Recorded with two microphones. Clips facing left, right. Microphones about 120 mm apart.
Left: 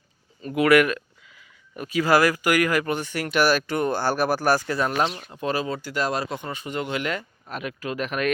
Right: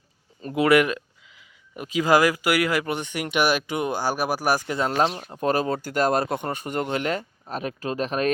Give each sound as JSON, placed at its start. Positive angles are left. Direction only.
{"t": 0.5, "sound": "speech", "side_deg": -25}
{"t": 5.4, "sound": "speech", "side_deg": -50}